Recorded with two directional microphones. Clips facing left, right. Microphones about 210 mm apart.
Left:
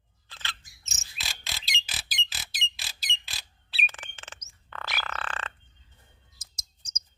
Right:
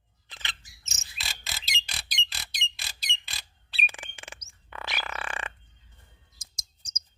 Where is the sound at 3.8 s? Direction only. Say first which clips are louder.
Right 1 dB; 10° right (ahead or behind).